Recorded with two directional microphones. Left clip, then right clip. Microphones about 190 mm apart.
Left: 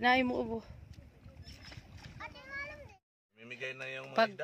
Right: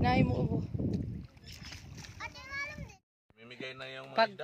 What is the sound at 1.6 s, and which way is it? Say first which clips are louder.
Splash: right 5 dB; 45° left (ahead or behind).